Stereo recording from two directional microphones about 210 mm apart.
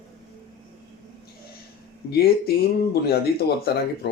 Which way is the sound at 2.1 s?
45° left (ahead or behind).